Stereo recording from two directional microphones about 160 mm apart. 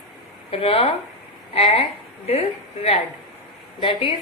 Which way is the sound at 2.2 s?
40° left (ahead or behind).